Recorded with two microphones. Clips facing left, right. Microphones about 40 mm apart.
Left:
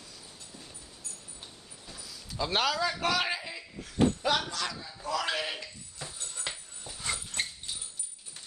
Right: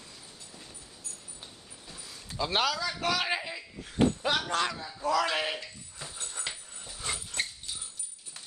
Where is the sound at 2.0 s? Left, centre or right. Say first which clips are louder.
Right 1 dB; right.